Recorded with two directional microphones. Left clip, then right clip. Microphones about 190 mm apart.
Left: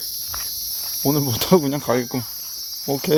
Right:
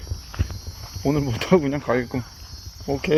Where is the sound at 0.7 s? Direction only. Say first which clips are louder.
Left 11 dB; 15° left (ahead or behind).